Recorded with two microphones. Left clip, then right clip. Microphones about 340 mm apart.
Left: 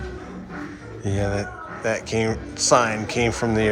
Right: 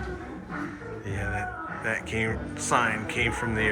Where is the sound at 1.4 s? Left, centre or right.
Centre.